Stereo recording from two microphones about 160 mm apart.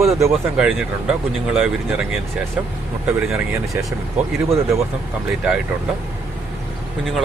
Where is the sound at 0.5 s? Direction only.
5° right (ahead or behind).